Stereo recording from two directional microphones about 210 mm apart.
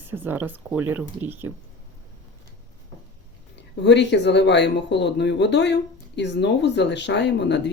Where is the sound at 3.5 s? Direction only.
55° left (ahead or behind).